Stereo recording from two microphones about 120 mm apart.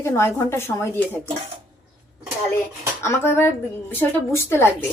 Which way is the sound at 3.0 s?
20° left (ahead or behind).